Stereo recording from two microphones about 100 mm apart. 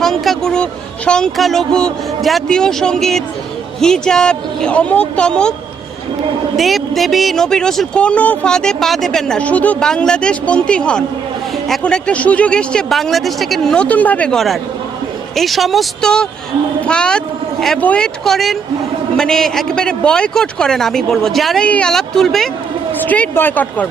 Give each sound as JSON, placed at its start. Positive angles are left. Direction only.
{"t": 0.0, "sound": "a woman's voice", "side_deg": 5}
{"t": 6.6, "sound": "speech", "side_deg": 0}
{"t": 14.3, "sound": "a woman's voice", "side_deg": 0}
{"t": 22.9, "sound": "speech", "side_deg": 15}